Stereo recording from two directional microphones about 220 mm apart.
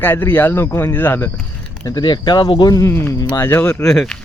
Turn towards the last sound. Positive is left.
turn(degrees=0)  # may be behind; listen again after turning